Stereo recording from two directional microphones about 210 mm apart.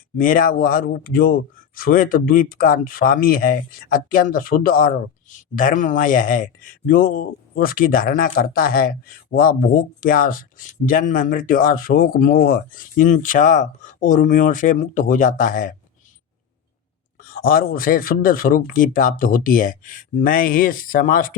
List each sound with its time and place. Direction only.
0.2 s a man's voice: 40° left (ahead or behind)
17.2 s a man's voice: 45° left (ahead or behind)